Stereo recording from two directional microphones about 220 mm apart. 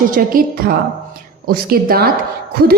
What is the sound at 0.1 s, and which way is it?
A woman's voice, 40° right (ahead or behind).